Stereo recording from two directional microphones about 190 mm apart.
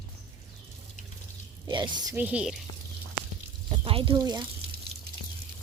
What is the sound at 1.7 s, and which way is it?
Speech, 25° right (ahead or behind).